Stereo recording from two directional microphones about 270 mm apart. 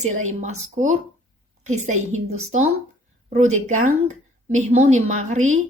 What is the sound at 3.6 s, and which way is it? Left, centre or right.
A woman's voice, right.